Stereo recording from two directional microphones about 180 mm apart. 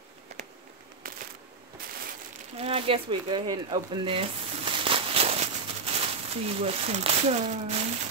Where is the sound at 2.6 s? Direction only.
30° right (ahead or behind).